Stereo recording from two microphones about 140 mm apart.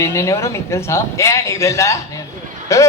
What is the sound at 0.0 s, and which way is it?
A man's voice, 20° left (ahead or behind).